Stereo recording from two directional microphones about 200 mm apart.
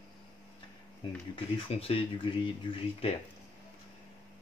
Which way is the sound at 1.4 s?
30° left (ahead or behind).